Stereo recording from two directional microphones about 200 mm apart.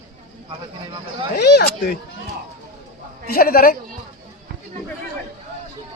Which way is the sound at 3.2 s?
50° left (ahead or behind).